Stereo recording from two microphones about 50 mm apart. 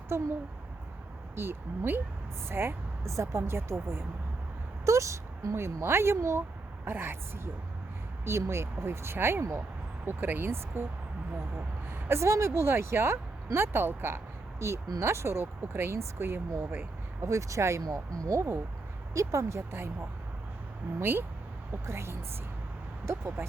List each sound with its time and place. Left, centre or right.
0.1 s speech: right
1.4 s speech: right
3.1 s speech: right
4.9 s speech: right
6.8 s speech: right
8.2 s speech: right
11.9 s speech: right
14.6 s speech: right
17.2 s speech: right
21.0 s speech: right
21.7 s speech: right